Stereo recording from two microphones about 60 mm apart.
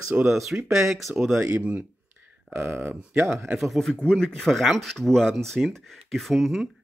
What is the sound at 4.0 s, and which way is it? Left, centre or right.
Speech, centre.